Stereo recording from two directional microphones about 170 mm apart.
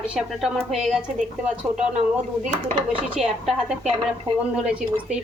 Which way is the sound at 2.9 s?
5° right (ahead or behind).